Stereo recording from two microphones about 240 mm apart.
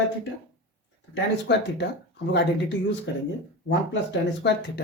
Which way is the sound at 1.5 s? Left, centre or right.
Left.